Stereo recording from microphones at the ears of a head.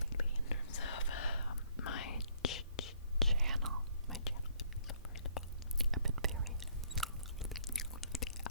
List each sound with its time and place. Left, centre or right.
0.0 s whispering: left
3.3 s whispering: right
4.2 s whispering: left
5.9 s whispering: right
7.7 s a sound: left